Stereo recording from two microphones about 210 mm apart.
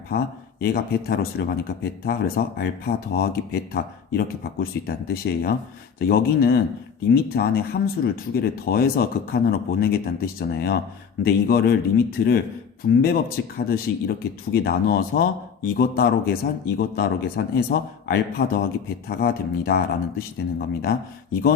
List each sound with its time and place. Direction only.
0.1 s speech: 50° left (ahead or behind)
13.6 s speech: 45° left (ahead or behind)